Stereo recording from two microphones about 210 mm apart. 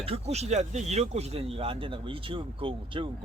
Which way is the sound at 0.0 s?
30° right (ahead or behind).